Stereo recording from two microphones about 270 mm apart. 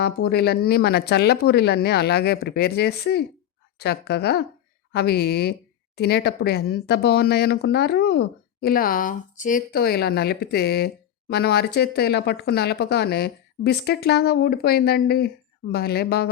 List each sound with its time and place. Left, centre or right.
0.0 s speech: left